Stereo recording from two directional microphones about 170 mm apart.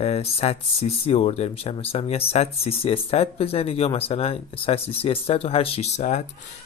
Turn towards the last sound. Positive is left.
turn(degrees=45)  # may be behind; listen again after turning